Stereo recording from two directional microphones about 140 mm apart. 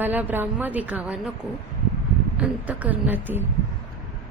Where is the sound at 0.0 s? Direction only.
15° right (ahead or behind).